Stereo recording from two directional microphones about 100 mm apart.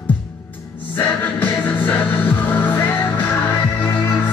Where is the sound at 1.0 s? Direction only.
20° left (ahead or behind).